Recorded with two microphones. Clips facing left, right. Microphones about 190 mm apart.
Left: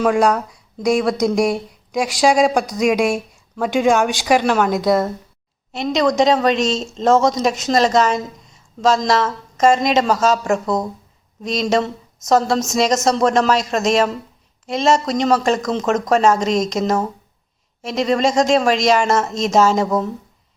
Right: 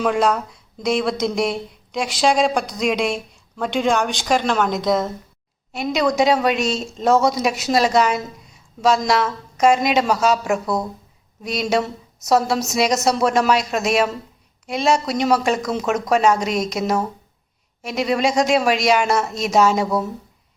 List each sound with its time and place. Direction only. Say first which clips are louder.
0.0 s a woman's voice: left 3 dB; centre (ahead or behind)